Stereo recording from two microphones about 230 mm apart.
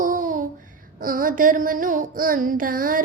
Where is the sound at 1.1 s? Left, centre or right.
Right.